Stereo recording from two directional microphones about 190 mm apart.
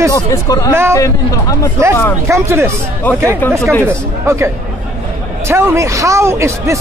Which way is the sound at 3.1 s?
10° left (ahead or behind).